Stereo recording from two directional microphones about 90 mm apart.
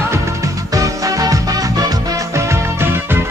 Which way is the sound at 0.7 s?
40° right (ahead or behind).